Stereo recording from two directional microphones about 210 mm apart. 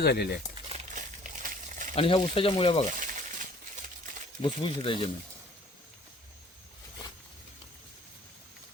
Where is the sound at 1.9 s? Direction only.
25° left (ahead or behind).